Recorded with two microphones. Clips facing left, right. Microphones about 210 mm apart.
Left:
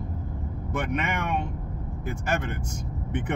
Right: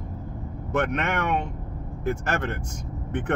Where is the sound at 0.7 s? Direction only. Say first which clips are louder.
Right 4 dB; 70° right (ahead or behind).